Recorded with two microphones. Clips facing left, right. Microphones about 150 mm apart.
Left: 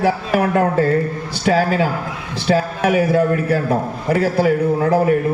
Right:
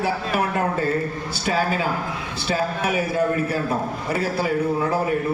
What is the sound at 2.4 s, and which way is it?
A man's voice, 65° left (ahead or behind).